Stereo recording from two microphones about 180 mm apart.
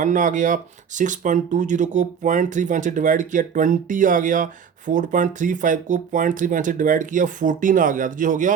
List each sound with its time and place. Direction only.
0.0 s speech: 45° right (ahead or behind)